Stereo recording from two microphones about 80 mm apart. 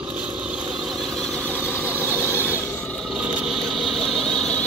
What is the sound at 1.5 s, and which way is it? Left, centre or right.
Vehicle, left.